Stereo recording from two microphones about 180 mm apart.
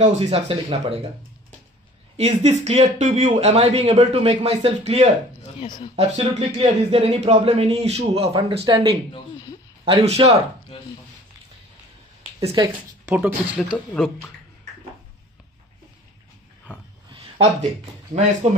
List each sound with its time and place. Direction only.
0.0 s speech: 40° right (ahead or behind)
2.1 s speech: 35° right (ahead or behind)
12.4 s speech: 30° right (ahead or behind)
13.1 s speech: 5° right (ahead or behind)
17.1 s a sound: 35° right (ahead or behind)
18.1 s speech: 45° right (ahead or behind)